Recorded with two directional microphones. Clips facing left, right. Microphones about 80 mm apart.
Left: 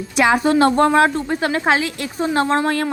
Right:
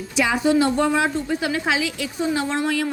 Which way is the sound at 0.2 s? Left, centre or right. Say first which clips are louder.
Left 4 dB; left.